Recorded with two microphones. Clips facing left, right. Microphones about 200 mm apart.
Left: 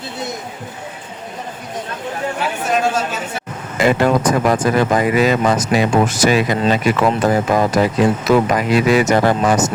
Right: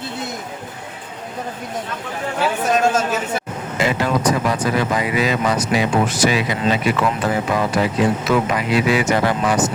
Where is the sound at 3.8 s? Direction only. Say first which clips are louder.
Left 5 dB; 50° left (ahead or behind).